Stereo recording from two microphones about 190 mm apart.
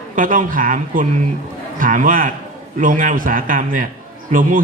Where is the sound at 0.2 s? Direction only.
45° right (ahead or behind).